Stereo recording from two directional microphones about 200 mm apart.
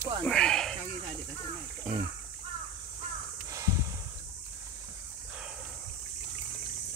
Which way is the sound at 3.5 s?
15° right (ahead or behind).